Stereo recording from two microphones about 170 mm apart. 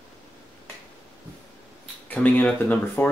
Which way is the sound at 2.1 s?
10° left (ahead or behind).